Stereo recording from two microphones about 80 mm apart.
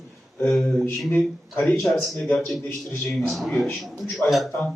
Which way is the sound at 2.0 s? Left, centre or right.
Centre.